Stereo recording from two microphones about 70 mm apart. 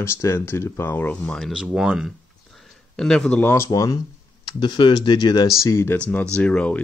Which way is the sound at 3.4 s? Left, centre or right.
Left.